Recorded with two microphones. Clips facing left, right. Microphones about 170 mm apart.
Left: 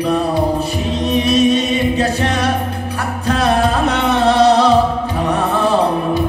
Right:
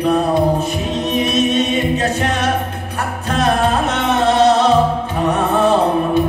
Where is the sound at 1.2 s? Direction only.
35° left (ahead or behind).